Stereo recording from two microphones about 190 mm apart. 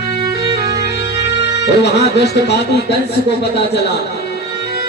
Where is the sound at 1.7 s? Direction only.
60° left (ahead or behind).